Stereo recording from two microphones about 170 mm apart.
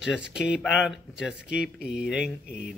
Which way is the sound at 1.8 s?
90° left.